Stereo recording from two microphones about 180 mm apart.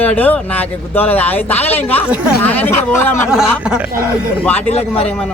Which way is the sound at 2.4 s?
10° left (ahead or behind).